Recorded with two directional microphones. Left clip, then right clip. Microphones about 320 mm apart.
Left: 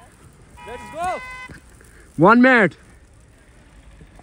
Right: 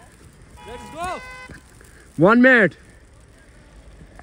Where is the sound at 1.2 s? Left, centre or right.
Left.